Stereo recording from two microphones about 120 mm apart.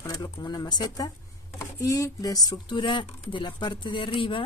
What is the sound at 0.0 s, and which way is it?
Speech, 35° left (ahead or behind).